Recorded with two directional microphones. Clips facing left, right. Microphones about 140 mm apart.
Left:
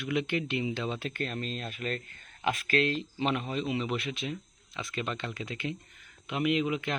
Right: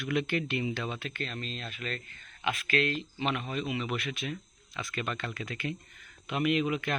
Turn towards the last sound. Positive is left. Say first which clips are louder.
# even
turn(degrees=20)  # may be behind; listen again after turning